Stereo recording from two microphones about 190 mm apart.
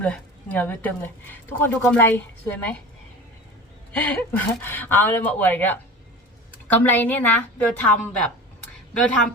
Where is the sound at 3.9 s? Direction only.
10° left (ahead or behind).